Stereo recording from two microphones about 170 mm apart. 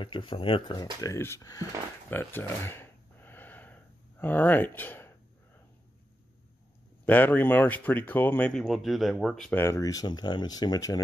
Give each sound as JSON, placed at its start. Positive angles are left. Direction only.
{"t": 0.0, "sound": "speech", "side_deg": 30}
{"t": 1.0, "sound": "speech", "side_deg": 15}
{"t": 7.1, "sound": "speech", "side_deg": 10}
{"t": 9.6, "sound": "speech", "side_deg": 20}